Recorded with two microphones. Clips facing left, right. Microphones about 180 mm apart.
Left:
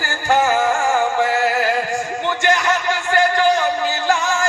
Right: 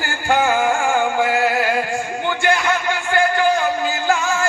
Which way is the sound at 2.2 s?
40° left (ahead or behind).